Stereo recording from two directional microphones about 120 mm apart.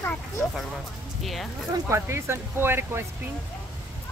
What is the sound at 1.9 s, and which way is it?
Speech, 20° right (ahead or behind).